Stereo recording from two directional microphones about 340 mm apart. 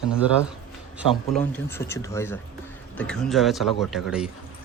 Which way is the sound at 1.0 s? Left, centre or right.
Centre.